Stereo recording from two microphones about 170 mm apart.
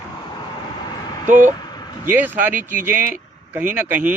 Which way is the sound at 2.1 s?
10° right (ahead or behind).